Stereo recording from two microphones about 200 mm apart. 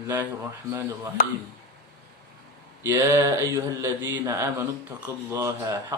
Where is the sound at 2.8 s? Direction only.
15° right (ahead or behind).